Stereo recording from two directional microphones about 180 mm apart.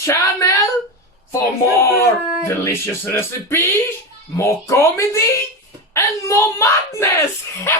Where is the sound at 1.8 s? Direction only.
15° left (ahead or behind).